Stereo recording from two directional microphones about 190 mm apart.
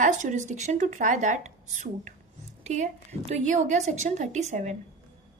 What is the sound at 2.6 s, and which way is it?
A woman's voice, 40° right (ahead or behind).